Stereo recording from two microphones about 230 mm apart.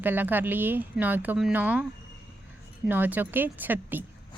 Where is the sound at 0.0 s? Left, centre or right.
Centre.